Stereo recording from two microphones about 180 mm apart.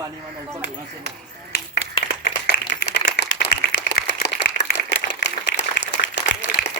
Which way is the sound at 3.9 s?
65° left (ahead or behind).